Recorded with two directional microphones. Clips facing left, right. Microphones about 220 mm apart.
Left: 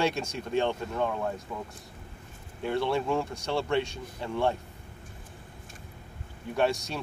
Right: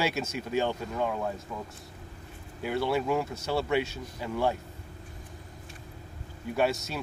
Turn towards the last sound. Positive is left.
turn(degrees=-5)  # may be behind; listen again after turning